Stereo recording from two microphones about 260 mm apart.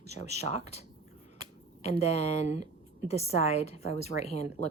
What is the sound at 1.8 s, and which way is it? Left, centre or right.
Speech, left.